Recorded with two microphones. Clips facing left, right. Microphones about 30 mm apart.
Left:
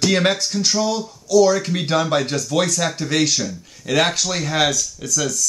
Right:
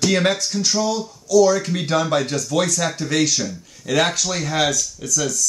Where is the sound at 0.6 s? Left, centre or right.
Left.